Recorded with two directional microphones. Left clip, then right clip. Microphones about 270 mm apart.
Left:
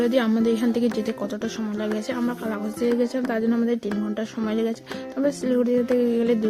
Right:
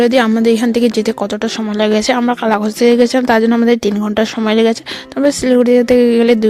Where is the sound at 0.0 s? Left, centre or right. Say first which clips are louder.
Right 10 dB; right.